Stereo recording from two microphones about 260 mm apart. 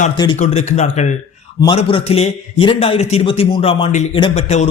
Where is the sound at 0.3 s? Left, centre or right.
Left.